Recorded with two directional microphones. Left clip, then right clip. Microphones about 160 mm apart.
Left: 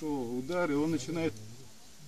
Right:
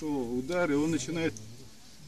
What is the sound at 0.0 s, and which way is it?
Speech, 10° left (ahead or behind).